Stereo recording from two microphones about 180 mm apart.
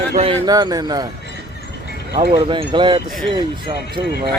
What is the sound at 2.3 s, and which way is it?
Speech, 30° right (ahead or behind).